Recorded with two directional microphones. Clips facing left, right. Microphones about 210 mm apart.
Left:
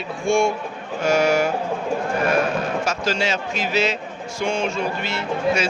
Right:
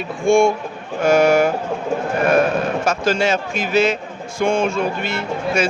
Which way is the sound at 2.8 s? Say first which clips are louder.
Right 5 dB; 50° right (ahead or behind).